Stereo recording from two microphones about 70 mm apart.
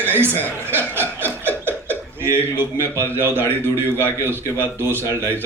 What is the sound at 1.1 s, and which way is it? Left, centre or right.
Chuckle, right.